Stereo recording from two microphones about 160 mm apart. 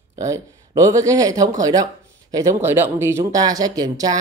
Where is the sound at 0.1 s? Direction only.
20° right (ahead or behind).